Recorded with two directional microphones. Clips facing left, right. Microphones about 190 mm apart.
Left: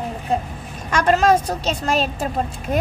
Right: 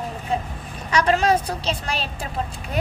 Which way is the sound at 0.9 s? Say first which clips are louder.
Left 3 dB; 50° left (ahead or behind).